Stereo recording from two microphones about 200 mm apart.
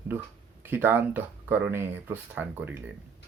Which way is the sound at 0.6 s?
10° right (ahead or behind).